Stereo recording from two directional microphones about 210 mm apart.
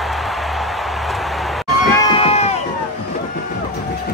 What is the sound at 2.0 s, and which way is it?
Run, 30° left (ahead or behind).